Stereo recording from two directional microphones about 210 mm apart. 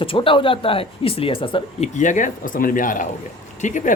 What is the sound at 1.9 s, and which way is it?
Speech, 35° left (ahead or behind).